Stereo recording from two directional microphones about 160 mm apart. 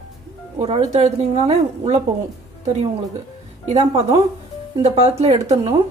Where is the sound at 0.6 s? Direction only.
40° right (ahead or behind).